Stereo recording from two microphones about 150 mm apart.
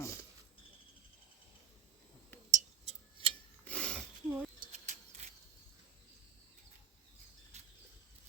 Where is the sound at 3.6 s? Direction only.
5° left (ahead or behind).